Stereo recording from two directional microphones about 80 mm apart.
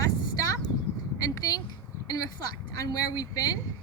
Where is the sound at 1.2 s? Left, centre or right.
Left.